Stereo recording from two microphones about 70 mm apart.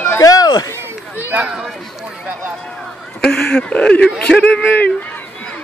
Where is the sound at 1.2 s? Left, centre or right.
Right.